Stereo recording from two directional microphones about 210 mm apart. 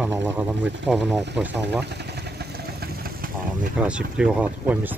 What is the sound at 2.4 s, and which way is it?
Vehicle, 45° right (ahead or behind).